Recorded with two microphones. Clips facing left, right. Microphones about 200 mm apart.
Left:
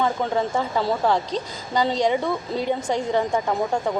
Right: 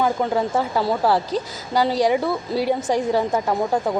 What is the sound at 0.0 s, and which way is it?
A woman's voice, 5° right (ahead or behind).